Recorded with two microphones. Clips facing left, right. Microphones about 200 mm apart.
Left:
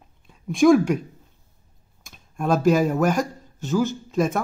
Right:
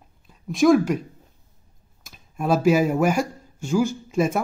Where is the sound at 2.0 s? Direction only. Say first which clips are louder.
Even; 5° right (ahead or behind).